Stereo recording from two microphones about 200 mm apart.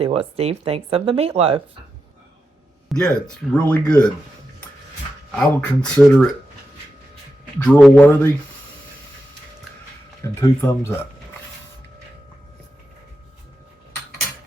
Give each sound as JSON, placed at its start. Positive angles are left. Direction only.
{"t": 0.0, "sound": "speech", "side_deg": -30}
{"t": 2.9, "sound": "speech", "side_deg": 5}
{"t": 5.5, "sound": "speech", "side_deg": 5}
{"t": 7.6, "sound": "a man's voice", "side_deg": 5}
{"t": 10.4, "sound": "a man's voice", "side_deg": 15}